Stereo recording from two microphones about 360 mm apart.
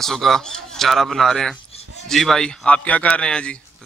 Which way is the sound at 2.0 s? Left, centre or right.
Centre.